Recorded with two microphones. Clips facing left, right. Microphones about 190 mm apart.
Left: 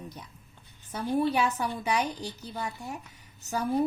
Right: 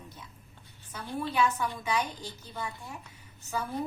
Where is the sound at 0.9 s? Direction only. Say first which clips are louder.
Left 8 dB; 40° left (ahead or behind).